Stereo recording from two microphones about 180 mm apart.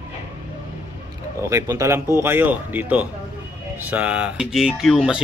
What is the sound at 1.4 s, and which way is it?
Speech, 15° right (ahead or behind).